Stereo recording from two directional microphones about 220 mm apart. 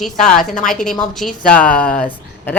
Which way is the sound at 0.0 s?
5° left (ahead or behind).